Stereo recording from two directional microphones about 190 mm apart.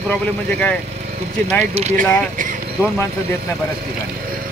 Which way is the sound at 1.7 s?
35° right (ahead or behind).